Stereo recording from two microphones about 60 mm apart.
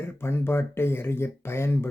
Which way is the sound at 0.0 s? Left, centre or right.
Left.